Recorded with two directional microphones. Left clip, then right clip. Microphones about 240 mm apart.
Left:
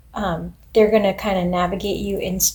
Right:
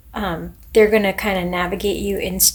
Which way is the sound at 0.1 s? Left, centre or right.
Right.